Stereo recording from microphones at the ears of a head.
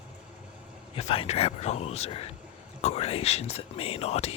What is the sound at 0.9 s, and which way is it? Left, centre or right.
Speech, left.